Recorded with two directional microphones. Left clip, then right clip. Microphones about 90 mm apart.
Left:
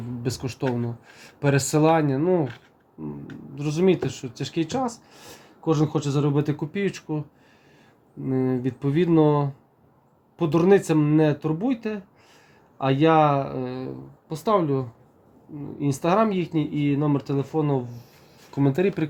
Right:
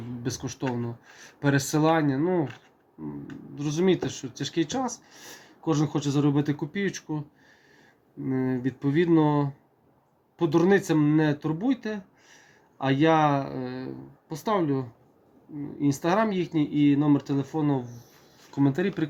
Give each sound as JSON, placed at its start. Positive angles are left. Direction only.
{"t": 0.2, "sound": "speech", "side_deg": 35}
{"t": 18.5, "sound": "speech", "side_deg": 45}